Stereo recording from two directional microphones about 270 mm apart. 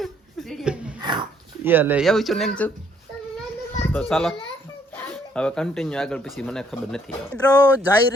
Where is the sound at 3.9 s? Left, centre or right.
Centre.